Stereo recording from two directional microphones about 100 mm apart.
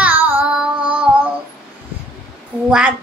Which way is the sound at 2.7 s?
15° right (ahead or behind).